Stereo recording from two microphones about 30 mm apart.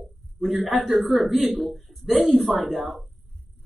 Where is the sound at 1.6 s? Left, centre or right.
Centre.